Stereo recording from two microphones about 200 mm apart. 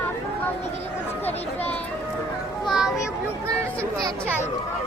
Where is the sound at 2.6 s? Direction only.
Centre (ahead or behind).